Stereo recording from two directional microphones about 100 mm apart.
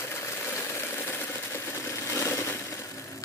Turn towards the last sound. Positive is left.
turn(degrees=30)  # may be behind; listen again after turning